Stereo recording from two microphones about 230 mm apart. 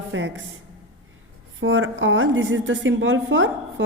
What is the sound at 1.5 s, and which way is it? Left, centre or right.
A woman's voice, right.